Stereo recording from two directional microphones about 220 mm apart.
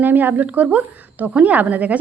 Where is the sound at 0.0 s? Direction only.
10° right (ahead or behind).